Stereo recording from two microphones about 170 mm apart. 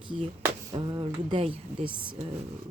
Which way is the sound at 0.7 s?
30° right (ahead or behind).